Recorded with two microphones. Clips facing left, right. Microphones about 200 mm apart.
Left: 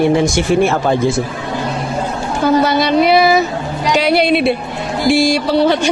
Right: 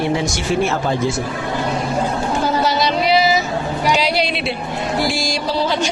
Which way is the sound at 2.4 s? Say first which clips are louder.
Left 8 dB; 55° left (ahead or behind).